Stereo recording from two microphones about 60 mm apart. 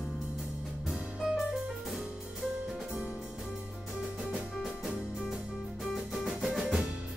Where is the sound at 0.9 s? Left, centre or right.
Centre.